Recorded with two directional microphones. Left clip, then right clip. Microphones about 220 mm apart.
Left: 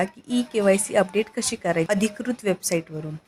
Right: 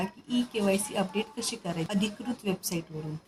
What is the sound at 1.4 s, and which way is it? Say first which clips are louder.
Speech: left 9 dB; 30° left (ahead or behind).